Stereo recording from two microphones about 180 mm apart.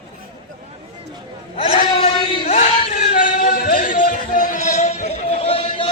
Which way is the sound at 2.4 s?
45° left (ahead or behind).